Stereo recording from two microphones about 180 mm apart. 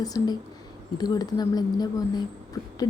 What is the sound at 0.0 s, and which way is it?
Speech, 20° left (ahead or behind).